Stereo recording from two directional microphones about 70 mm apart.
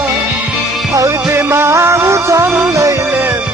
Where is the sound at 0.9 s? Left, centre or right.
Right.